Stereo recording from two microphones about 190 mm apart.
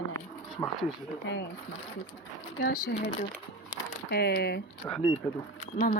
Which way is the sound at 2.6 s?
55° left (ahead or behind).